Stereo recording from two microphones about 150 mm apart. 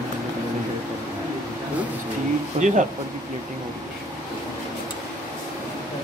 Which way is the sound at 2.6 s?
55° right (ahead or behind).